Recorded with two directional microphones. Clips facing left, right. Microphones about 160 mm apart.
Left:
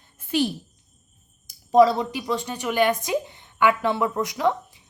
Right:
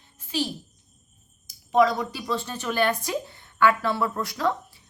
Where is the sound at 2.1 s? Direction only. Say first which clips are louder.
Left 2 dB; 15° left (ahead or behind).